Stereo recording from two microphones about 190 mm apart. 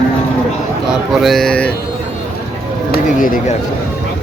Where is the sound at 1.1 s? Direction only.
Centre (ahead or behind).